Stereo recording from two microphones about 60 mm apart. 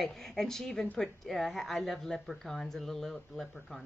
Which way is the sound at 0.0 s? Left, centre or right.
Centre.